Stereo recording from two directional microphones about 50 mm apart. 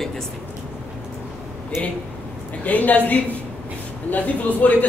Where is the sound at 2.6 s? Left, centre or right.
Left.